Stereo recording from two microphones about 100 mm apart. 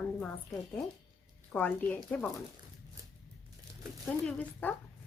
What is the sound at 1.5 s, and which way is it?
Speech, 20° left (ahead or behind).